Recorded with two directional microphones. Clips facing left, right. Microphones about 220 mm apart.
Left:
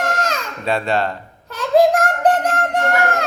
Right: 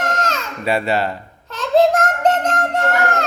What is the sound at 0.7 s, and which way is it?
Speech, 5° right (ahead or behind).